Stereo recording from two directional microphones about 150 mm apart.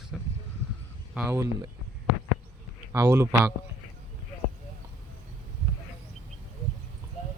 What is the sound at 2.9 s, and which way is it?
Speech, 20° right (ahead or behind).